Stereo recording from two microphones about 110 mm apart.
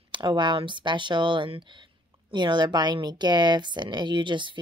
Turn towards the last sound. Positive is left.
turn(degrees=-45)  # may be behind; listen again after turning